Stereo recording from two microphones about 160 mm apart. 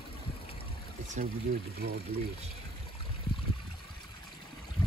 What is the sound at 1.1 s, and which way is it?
Speech, 70° right (ahead or behind).